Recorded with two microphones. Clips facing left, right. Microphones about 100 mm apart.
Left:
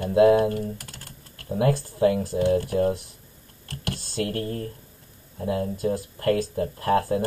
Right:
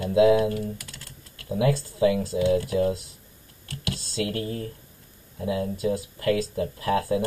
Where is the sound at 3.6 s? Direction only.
45° left (ahead or behind).